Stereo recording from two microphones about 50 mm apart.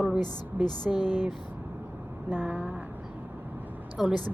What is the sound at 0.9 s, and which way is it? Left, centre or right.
Speech, centre.